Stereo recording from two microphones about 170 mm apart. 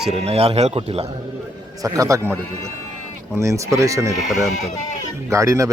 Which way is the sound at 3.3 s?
20° right (ahead or behind).